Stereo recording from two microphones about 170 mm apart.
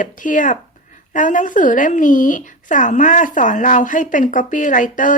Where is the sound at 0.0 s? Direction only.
50° left (ahead or behind).